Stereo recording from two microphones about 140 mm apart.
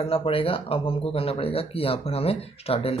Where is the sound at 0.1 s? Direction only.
40° left (ahead or behind).